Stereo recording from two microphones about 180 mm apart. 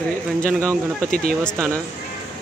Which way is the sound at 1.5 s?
15° right (ahead or behind).